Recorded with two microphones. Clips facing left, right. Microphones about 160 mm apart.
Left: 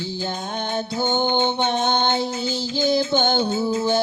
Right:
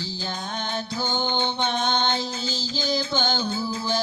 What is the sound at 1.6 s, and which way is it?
Music, 50° left (ahead or behind).